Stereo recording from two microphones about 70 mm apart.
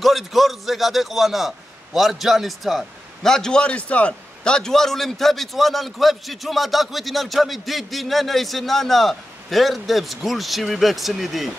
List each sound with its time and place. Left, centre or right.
0.0 s a man's voice: centre